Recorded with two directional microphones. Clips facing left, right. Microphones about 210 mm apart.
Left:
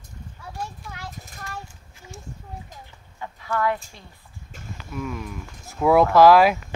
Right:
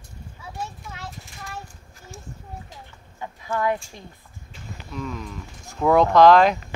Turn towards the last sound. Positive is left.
turn(degrees=5)  # may be behind; listen again after turning